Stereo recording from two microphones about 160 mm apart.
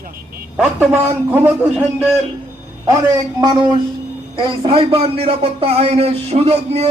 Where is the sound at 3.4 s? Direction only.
25° right (ahead or behind).